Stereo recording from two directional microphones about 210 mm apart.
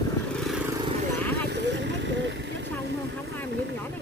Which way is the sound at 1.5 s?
55° right (ahead or behind).